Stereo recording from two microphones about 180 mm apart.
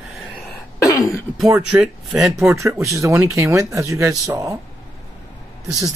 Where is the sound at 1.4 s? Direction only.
5° right (ahead or behind).